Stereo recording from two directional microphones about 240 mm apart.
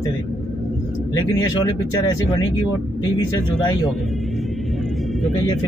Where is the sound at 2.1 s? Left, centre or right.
Centre.